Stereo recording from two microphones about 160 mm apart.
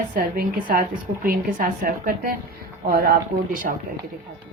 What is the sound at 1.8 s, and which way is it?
A woman's voice, 65° right (ahead or behind).